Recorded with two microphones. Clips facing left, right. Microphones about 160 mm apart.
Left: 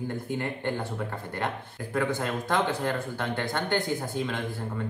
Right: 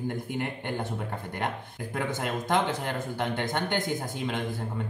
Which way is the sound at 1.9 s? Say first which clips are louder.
Left 3 dB; 15° right (ahead or behind).